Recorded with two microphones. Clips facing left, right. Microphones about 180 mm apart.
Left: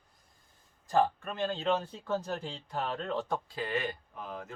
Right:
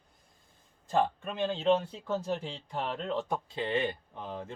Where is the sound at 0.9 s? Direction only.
20° right (ahead or behind).